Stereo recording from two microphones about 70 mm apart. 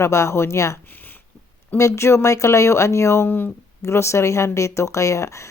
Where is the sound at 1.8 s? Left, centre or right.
Left.